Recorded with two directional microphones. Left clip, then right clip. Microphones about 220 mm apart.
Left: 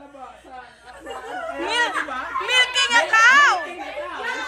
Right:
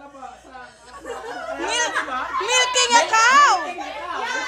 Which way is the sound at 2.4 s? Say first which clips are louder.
Left 1 dB; 20° right (ahead or behind).